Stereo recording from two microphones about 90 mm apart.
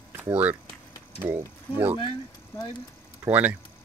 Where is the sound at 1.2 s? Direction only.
30° right (ahead or behind).